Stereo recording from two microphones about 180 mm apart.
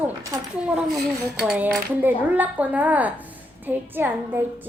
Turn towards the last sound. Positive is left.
turn(degrees=-10)  # may be behind; listen again after turning